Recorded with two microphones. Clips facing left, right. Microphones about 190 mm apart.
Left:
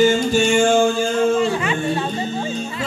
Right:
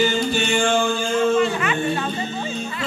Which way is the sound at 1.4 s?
30° left (ahead or behind).